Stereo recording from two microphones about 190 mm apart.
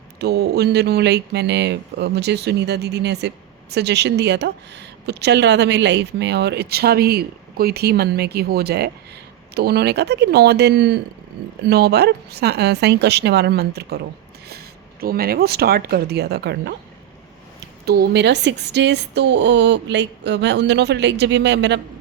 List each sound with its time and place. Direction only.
0.2 s speech: 60° right (ahead or behind)
15.0 s speech: 50° right (ahead or behind)
17.8 s speech: 55° right (ahead or behind)